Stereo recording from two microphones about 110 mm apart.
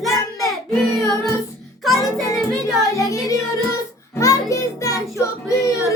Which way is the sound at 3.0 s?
30° left (ahead or behind).